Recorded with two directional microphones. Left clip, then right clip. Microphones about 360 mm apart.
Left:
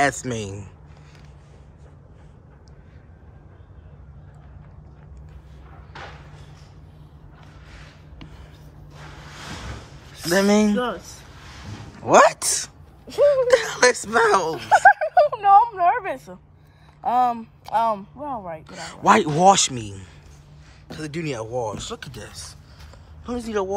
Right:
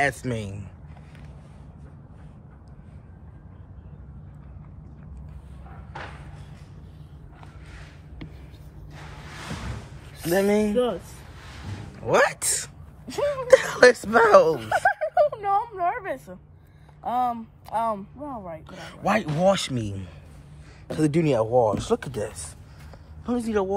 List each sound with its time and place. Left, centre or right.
0.0 s a man's voice: centre
10.3 s a man's voice: centre
12.0 s speech: centre
14.6 s a sound: left
17.0 s speech: left
18.7 s a man's voice: centre